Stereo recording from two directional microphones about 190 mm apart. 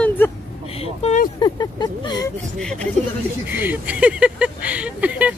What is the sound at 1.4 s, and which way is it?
Speech, 20° left (ahead or behind).